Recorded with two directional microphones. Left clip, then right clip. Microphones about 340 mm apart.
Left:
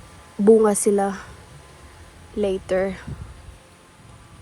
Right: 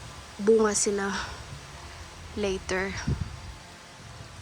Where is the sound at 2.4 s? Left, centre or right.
Centre.